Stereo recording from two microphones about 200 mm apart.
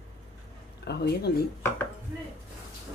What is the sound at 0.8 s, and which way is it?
Speech, 55° left (ahead or behind).